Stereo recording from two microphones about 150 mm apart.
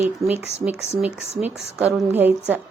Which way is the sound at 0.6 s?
10° right (ahead or behind).